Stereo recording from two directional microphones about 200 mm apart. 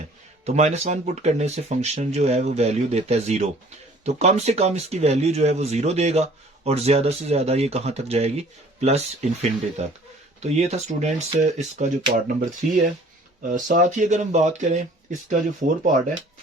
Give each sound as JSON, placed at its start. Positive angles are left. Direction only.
{"t": 0.4, "sound": "speech", "side_deg": -35}